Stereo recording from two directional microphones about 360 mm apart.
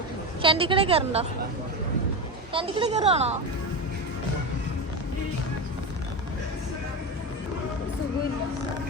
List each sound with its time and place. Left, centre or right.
0.4 s a woman's voice: centre
2.5 s a woman's voice: centre